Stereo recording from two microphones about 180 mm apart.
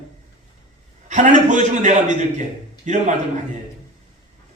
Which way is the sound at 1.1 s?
40° right (ahead or behind).